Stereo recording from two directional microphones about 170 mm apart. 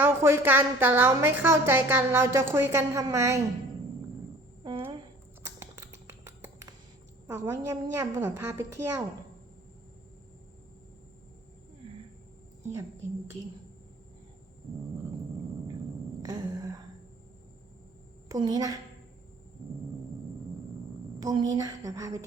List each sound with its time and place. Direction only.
0.0 s a woman's voice: 15° right (ahead or behind)
7.3 s a woman's voice: 20° right (ahead or behind)
16.2 s a sound: 20° right (ahead or behind)
18.3 s a woman's voice: 25° right (ahead or behind)
21.2 s a woman's voice: 20° right (ahead or behind)